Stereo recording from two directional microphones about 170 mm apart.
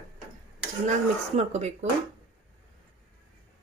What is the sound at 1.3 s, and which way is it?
Speech, 40° right (ahead or behind).